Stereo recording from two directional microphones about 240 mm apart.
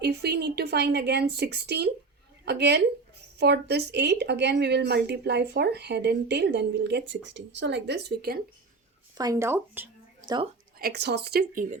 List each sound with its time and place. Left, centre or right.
0.0 s a woman's voice: right
9.1 s speech: centre
10.2 s speech: centre
10.8 s a woman's voice: right